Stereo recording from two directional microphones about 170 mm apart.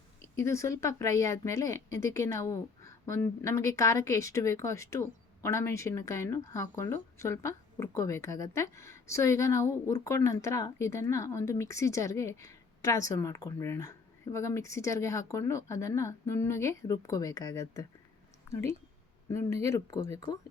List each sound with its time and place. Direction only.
0.3 s speech: 15° left (ahead or behind)